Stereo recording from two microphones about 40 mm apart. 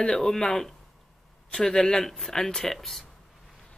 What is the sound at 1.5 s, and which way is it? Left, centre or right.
Speech, centre.